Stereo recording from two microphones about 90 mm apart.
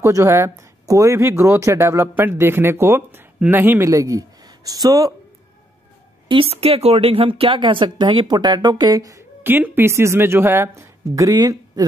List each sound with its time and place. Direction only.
0.0 s a man's voice: 35° right (ahead or behind)
6.2 s speech: 85° right; by 9.2 s 40° right (ahead or behind)
9.4 s speech: 20° right (ahead or behind); by 11.8 s 45° right (ahead or behind)